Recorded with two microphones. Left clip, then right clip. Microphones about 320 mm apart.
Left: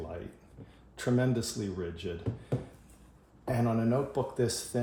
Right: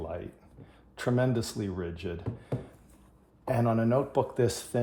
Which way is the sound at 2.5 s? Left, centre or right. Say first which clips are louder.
Left 1 dB; centre.